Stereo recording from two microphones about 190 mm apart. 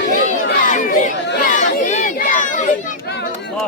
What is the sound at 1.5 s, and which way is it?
Crowd, 40° left (ahead or behind).